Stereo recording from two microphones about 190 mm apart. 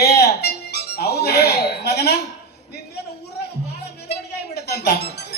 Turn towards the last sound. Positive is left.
turn(degrees=55)  # may be behind; listen again after turning